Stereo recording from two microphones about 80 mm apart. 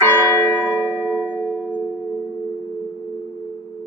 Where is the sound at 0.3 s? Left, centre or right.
Left.